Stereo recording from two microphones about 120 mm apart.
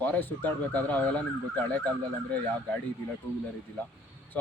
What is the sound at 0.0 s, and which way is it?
Speech, 15° left (ahead or behind).